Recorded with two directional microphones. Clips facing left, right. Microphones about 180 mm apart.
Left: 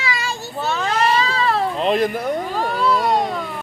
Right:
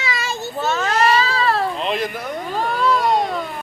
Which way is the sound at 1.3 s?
20° left (ahead or behind).